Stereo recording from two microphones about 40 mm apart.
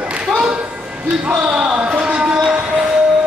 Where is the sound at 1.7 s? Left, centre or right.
Right.